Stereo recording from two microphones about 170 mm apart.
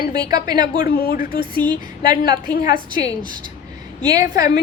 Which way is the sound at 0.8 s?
65° left (ahead or behind).